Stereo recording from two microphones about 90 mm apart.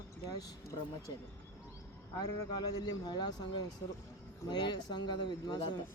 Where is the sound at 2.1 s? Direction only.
50° left (ahead or behind).